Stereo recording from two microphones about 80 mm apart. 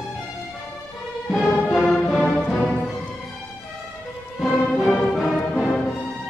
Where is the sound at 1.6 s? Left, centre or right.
Centre.